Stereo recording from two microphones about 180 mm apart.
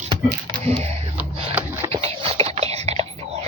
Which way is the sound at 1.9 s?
35° right (ahead or behind).